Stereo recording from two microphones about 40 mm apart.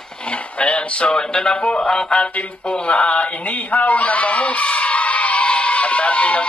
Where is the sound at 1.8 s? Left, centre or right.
Centre.